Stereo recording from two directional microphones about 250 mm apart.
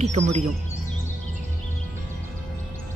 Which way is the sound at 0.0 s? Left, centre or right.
Right.